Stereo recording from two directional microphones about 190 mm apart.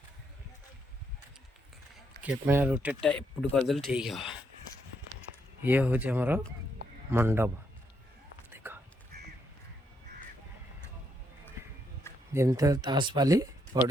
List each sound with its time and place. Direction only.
2.2 s speech: 10° right (ahead or behind)
3.1 s speech: 5° left (ahead or behind)
5.6 s speech: 10° right (ahead or behind)
8.4 s whispering: 10° right (ahead or behind)
9.1 s duck: 55° right (ahead or behind)
12.3 s speech: 15° right (ahead or behind)